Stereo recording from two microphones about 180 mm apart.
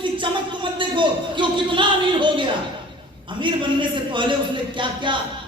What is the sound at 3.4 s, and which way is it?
A man's voice, 25° right (ahead or behind).